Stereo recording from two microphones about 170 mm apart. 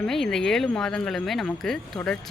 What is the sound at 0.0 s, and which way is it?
Speech, 5° left (ahead or behind).